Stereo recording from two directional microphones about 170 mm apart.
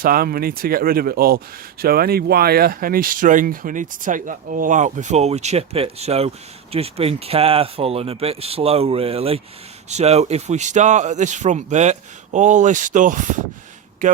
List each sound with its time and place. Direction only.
0.0 s speech: 60° right (ahead or behind)